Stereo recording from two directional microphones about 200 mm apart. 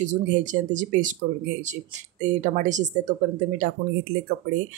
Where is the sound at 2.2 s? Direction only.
35° right (ahead or behind).